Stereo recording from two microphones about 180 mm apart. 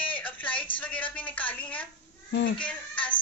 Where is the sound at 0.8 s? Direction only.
10° left (ahead or behind).